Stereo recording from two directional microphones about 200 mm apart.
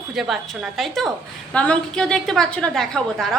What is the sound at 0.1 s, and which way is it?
A woman's voice, centre (ahead or behind).